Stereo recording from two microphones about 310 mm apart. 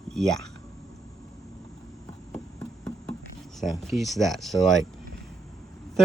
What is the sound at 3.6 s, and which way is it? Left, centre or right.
Speech, centre.